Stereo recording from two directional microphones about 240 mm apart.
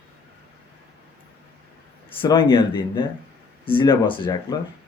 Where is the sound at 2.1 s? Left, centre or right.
Centre.